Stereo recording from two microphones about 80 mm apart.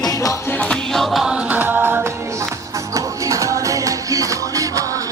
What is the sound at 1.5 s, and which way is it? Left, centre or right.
Music, right.